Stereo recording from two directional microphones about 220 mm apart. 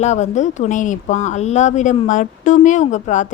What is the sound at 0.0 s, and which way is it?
A woman's voice, 30° left (ahead or behind).